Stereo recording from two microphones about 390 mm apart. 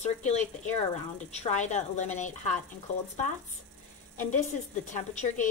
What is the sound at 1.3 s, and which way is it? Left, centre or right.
A woman's voice, centre.